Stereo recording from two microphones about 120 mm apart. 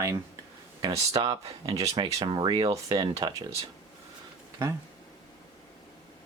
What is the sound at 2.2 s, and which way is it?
Speech, 40° right (ahead or behind).